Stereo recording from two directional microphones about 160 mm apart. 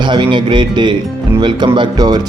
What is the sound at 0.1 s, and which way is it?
Speech, 30° right (ahead or behind).